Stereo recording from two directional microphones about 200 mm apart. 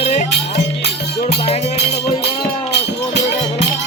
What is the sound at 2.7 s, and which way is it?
Music, 60° left (ahead or behind).